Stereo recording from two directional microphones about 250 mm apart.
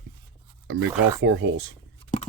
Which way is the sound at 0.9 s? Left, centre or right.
Centre.